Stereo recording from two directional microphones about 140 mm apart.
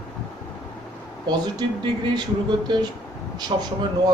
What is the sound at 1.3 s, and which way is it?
A man's voice, 30° right (ahead or behind).